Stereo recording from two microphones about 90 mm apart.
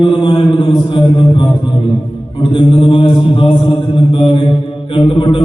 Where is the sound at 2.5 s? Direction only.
70° left (ahead or behind).